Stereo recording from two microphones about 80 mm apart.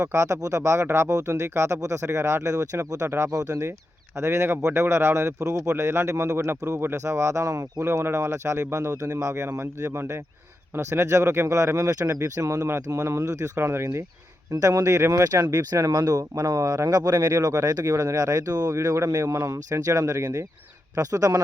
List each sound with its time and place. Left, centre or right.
0.0 s speech: right
3.2 s speech: right
3.6 s speech: right
14.5 s speech: right